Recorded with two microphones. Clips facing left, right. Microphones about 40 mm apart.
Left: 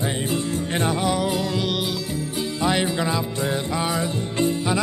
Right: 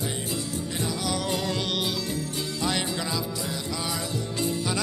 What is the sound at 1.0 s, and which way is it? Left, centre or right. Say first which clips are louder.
Music: left 7 dB; left.